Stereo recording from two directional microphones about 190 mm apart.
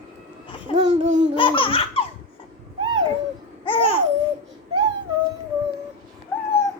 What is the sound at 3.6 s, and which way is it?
Babbling, 30° left (ahead or behind).